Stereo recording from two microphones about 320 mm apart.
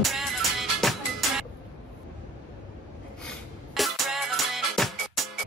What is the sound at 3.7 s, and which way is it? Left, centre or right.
Music, centre.